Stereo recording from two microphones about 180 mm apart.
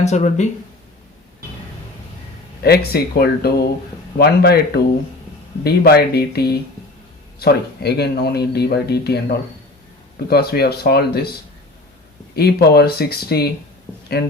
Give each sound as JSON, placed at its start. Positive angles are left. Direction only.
{"t": 0.0, "sound": "speech", "side_deg": 40}
{"t": 2.6, "sound": "speech", "side_deg": 60}
{"t": 5.6, "sound": "speech", "side_deg": 60}
{"t": 10.2, "sound": "speech", "side_deg": 60}
{"t": 12.4, "sound": "speech", "side_deg": 65}